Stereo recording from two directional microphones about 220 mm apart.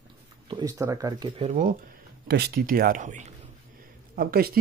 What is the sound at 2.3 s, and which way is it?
Speech, 45° right (ahead or behind).